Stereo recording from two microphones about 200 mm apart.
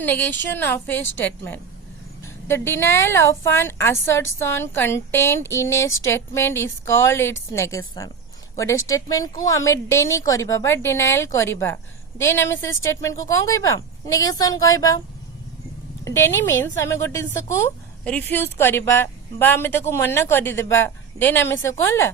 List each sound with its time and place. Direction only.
0.0 s a woman's voice: 10° left (ahead or behind)
16.0 s a woman's voice: 15° left (ahead or behind)